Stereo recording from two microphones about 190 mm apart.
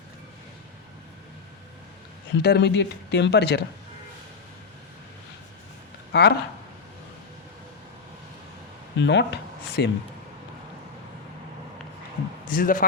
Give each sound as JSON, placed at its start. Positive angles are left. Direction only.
{"t": 2.4, "sound": "speech", "side_deg": 60}
{"t": 6.1, "sound": "speech", "side_deg": 60}
{"t": 9.0, "sound": "speech", "side_deg": 70}
{"t": 12.5, "sound": "speech", "side_deg": 45}